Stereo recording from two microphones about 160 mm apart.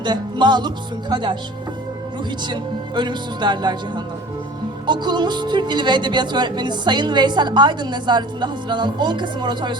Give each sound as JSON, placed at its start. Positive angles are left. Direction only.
{"t": 0.0, "sound": "a woman's voice", "side_deg": -30}
{"t": 2.5, "sound": "a woman's voice", "side_deg": -30}